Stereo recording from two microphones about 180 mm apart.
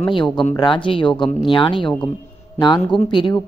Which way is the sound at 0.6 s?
25° left (ahead or behind).